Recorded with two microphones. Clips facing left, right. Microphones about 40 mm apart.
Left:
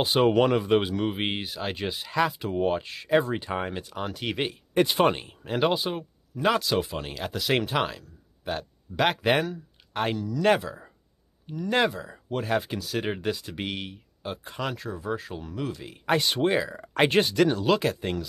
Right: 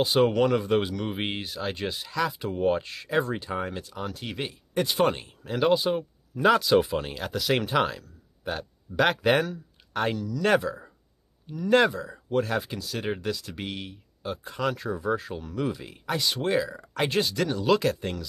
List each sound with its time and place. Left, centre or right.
0.3 s speech: centre
2.0 s speech: left
2.6 s speech: centre
3.3 s speech: centre
4.2 s speech: left
5.0 s speech: left
5.7 s speech: centre
13.2 s speech: left
14.2 s speech: centre
16.1 s speech: left
16.3 s speech: left
16.9 s speech: left
17.6 s speech: centre